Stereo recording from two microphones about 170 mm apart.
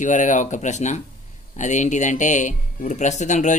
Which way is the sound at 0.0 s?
45° left (ahead or behind).